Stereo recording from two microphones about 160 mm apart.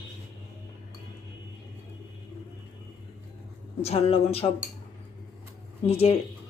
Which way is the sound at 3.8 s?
40° left (ahead or behind).